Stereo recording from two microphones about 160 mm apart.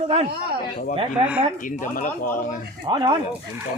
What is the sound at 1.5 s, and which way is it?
Speech, 55° left (ahead or behind).